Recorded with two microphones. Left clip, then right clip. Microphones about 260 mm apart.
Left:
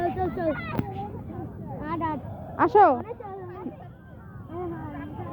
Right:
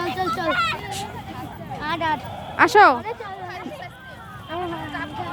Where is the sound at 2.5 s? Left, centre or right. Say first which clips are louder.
Right 4 dB; centre.